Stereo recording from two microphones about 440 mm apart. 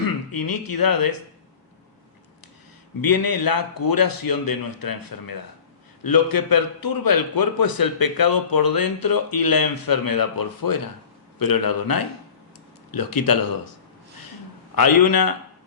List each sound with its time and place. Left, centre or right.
0.3 s a man's voice: left
3.0 s a man's voice: left
14.8 s a man's voice: left